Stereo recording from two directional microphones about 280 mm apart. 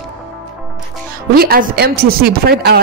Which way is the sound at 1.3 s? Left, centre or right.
Right.